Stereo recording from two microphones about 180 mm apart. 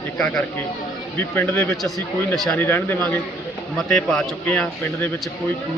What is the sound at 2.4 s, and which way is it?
A man's voice, 10° left (ahead or behind).